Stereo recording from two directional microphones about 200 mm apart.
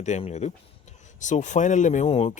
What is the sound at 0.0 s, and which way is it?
Speech, 35° left (ahead or behind).